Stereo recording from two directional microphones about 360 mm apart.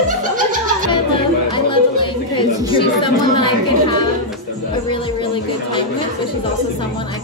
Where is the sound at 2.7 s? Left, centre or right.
Centre.